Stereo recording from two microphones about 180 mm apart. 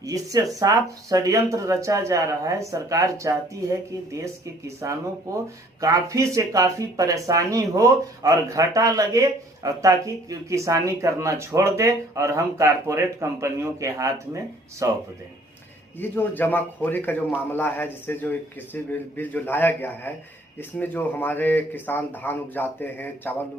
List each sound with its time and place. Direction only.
0.0 s speech: 20° right (ahead or behind)
16.0 s a man's voice: 10° left (ahead or behind)